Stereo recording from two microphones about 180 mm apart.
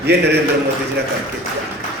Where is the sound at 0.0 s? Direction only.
65° right (ahead or behind).